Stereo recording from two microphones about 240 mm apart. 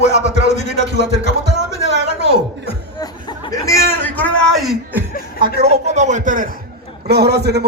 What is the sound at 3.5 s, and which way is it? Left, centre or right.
Chatter, centre.